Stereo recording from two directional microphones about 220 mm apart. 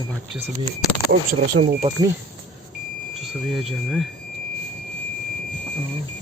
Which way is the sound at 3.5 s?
Centre (ahead or behind).